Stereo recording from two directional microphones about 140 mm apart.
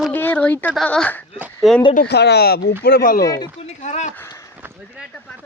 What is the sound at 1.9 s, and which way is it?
Speech, 90° left.